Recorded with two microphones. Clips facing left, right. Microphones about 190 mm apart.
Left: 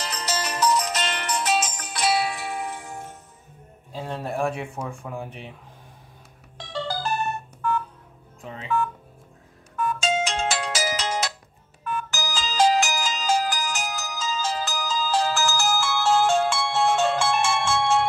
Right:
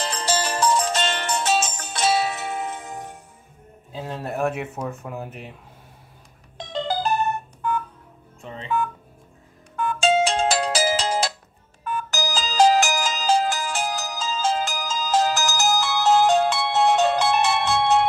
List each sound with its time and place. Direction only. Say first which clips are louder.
0.0 s music: right 4 dB; 30° right (ahead or behind)
3.9 s speech: even; 5° right (ahead or behind)
6.6 s music: right 4 dB; 20° right (ahead or behind)
8.4 s speech: right 1 dB; centre (ahead or behind)
9.8 s ringtone: right 5 dB; 30° right (ahead or behind); by 13.3 s 45° right (ahead or behind)
13.3 s ringtone: right 3 dB; 25° right (ahead or behind)